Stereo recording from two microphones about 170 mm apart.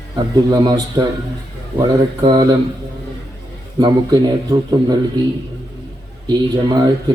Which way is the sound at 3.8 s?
25° right (ahead or behind).